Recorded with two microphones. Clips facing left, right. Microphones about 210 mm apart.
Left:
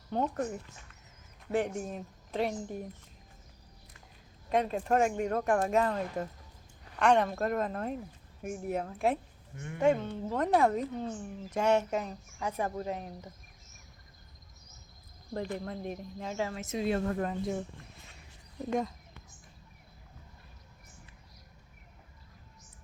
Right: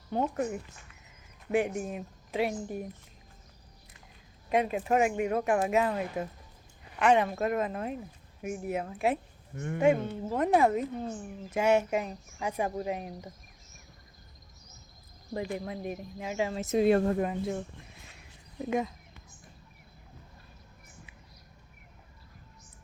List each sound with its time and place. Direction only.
0.1 s speech: 10° right (ahead or behind)
4.4 s speech: 10° right (ahead or behind)
9.6 s speech: 50° right (ahead or behind)
9.8 s speech: 10° right (ahead or behind)
15.3 s speech: 10° right (ahead or behind)
16.7 s a woman's voice: 65° right (ahead or behind)
17.2 s speech: 5° right (ahead or behind)